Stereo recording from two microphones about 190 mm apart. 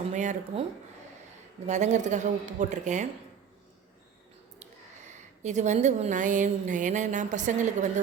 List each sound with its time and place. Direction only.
0.1 s speech: 40° right (ahead or behind)
1.6 s a woman's voice: 40° right (ahead or behind)
5.4 s a woman's voice: 40° right (ahead or behind)